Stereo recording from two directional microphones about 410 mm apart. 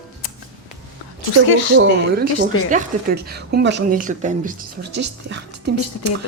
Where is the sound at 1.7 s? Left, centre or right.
Right.